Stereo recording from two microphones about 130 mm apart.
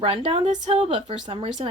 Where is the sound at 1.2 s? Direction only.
45° right (ahead or behind).